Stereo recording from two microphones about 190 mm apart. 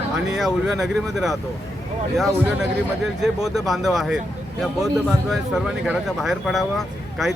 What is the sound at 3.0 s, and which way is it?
Speech, centre (ahead or behind).